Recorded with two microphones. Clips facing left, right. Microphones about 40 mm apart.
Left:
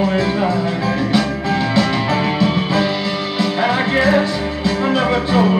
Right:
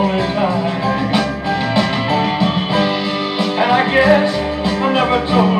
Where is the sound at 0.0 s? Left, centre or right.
Right.